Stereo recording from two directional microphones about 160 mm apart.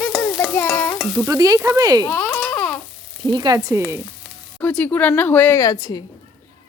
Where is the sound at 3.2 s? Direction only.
25° right (ahead or behind).